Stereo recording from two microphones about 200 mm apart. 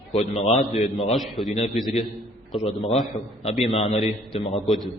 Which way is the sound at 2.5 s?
30° left (ahead or behind).